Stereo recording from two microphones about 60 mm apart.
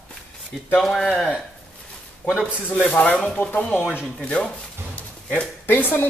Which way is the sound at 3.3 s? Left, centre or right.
Left.